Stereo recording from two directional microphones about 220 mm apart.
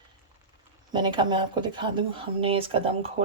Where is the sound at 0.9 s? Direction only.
20° right (ahead or behind).